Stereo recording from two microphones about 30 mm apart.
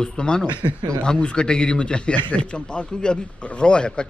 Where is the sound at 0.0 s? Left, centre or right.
Left.